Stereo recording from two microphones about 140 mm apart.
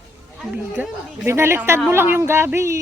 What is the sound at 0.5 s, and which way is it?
A woman's voice, 10° right (ahead or behind).